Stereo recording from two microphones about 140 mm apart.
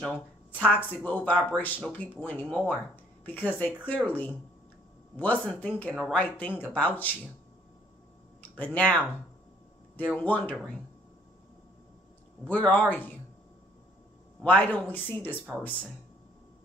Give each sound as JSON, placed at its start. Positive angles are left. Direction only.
{"t": 0.7, "sound": "speech", "side_deg": 10}
{"t": 8.4, "sound": "speech", "side_deg": 10}
{"t": 12.4, "sound": "speech", "side_deg": 10}
{"t": 14.4, "sound": "speech", "side_deg": 10}